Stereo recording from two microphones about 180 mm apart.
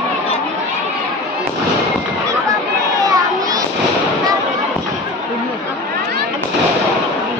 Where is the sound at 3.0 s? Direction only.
20° right (ahead or behind).